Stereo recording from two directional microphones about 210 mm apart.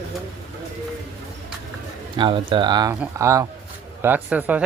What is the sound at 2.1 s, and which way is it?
Speech, 25° right (ahead or behind).